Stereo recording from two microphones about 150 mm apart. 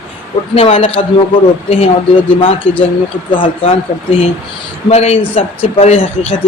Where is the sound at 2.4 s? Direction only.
35° left (ahead or behind).